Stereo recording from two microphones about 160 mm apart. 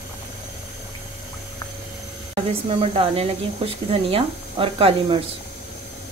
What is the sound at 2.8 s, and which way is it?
Speech, 35° right (ahead or behind).